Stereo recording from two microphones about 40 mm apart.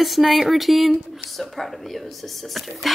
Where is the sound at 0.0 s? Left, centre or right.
Centre.